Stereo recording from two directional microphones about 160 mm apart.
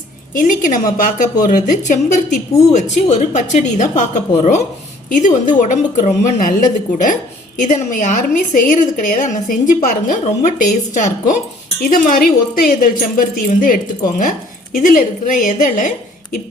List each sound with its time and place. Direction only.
0.3 s a woman's voice: 55° left (ahead or behind)
11.8 s speech: 65° left (ahead or behind)